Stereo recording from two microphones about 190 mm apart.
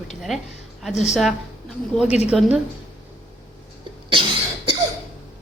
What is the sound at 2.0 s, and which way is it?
Speech, 35° left (ahead or behind).